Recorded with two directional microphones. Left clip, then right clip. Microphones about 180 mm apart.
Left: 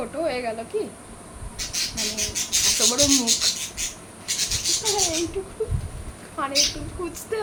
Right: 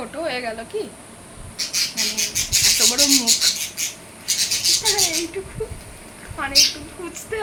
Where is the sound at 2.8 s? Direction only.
5° right (ahead or behind).